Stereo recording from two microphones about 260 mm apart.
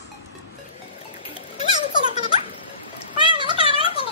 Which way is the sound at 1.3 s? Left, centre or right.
Left.